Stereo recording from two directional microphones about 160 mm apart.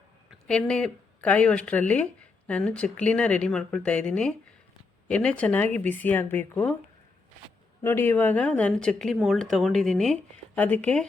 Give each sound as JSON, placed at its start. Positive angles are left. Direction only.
{"t": 0.3, "sound": "speech", "side_deg": 5}
{"t": 7.8, "sound": "speech", "side_deg": 15}